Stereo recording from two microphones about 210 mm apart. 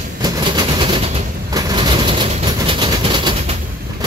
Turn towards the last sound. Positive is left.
turn(degrees=-25)  # may be behind; listen again after turning